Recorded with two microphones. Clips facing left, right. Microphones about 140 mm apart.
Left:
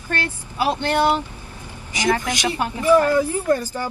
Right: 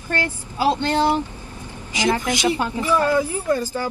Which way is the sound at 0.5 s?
15° left (ahead or behind).